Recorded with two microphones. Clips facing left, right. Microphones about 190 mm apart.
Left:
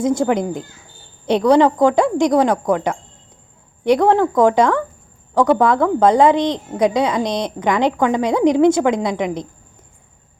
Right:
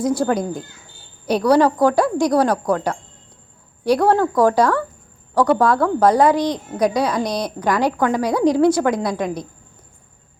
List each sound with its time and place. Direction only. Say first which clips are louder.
0.0 s a woman's voice: left 2 dB; 25° left (ahead or behind)